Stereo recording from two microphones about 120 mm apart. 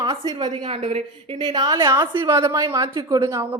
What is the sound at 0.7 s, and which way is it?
Speech, 65° right (ahead or behind).